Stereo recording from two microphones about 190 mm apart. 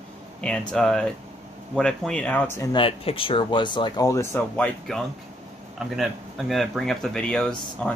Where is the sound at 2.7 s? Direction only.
30° left (ahead or behind); by 7.9 s 5° left (ahead or behind).